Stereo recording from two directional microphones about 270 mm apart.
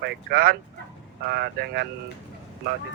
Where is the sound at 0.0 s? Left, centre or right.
Right.